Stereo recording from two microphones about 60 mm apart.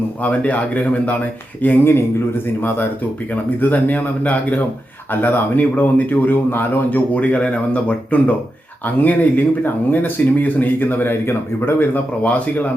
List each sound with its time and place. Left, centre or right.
0.2 s a man's voice: left
1.6 s a man's voice: left